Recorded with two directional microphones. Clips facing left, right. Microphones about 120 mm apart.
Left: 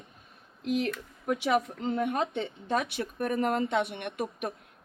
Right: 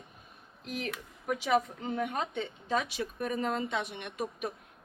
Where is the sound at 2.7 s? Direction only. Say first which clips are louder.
Left 2 dB; 60° left (ahead or behind).